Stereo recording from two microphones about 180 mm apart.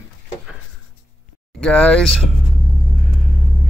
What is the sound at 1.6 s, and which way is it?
Speech, 5° left (ahead or behind).